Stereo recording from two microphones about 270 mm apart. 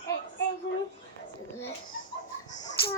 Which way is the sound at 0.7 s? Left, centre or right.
Left.